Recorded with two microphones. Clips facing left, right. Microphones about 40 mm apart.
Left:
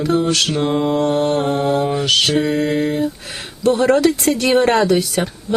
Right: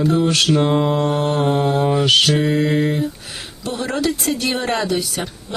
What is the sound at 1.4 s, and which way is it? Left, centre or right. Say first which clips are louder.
Mantra: even; centre.